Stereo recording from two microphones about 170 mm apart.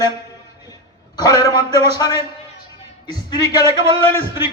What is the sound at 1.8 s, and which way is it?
A man's voice, 25° left (ahead or behind).